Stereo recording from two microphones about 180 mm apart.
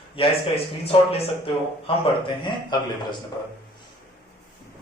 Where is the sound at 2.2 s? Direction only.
25° left (ahead or behind).